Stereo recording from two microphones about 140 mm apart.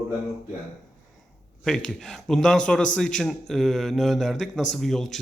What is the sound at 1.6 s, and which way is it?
A man's voice, 5° left (ahead or behind).